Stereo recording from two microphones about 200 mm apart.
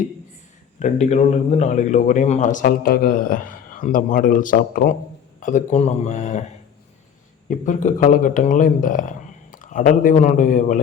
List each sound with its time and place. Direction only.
0.8 s speech: 35° left (ahead or behind)
7.4 s speech: 40° left (ahead or behind)